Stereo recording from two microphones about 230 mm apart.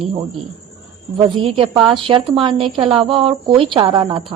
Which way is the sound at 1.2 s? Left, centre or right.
Right.